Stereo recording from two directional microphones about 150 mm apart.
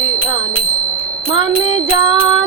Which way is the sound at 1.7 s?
35° right (ahead or behind).